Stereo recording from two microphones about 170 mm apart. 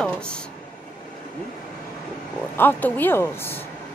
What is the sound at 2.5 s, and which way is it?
A woman's voice, 10° left (ahead or behind).